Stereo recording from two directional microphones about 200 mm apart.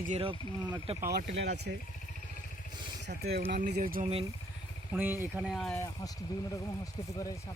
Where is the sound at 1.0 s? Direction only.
50° right (ahead or behind).